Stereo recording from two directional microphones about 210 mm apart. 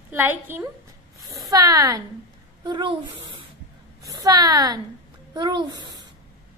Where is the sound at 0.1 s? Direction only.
10° right (ahead or behind).